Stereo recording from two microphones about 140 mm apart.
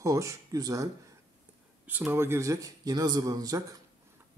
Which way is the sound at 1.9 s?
15° right (ahead or behind).